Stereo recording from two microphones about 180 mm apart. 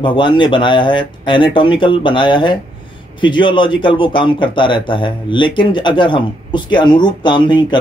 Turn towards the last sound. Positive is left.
turn(degrees=25)  # may be behind; listen again after turning